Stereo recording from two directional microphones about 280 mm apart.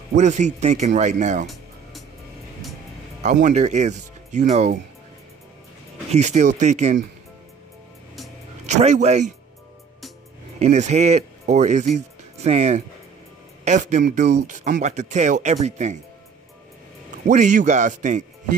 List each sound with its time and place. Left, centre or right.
0.1 s speech: right
3.2 s speech: right
6.1 s speech: right
8.6 s speech: right
10.6 s speech: right
17.3 s speech: right